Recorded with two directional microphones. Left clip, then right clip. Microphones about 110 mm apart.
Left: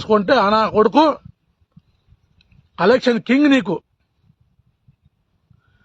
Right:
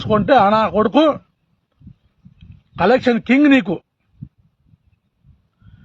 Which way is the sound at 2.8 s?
15° left (ahead or behind).